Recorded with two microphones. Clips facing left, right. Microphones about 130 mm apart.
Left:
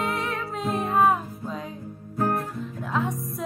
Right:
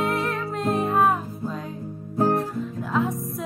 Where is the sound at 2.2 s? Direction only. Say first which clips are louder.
Right 4 dB; 30° right (ahead or behind).